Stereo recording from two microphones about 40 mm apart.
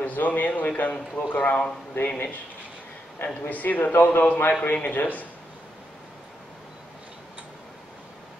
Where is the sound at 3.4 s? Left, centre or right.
Left.